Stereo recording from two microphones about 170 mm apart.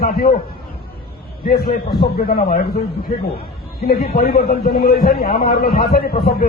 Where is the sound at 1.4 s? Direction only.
65° left (ahead or behind).